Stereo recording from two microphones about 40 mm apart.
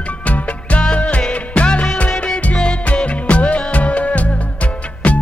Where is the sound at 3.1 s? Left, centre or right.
Left.